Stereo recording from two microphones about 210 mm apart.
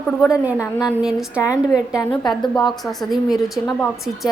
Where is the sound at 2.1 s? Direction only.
20° left (ahead or behind).